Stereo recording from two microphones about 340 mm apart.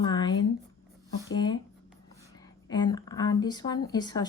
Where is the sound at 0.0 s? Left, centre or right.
Centre.